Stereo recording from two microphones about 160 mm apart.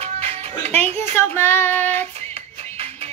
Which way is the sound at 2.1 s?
40° right (ahead or behind).